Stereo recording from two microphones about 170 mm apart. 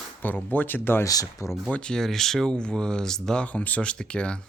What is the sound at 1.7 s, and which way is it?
Speech, 5° left (ahead or behind).